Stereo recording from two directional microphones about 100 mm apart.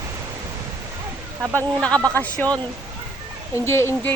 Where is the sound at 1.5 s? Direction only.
10° left (ahead or behind).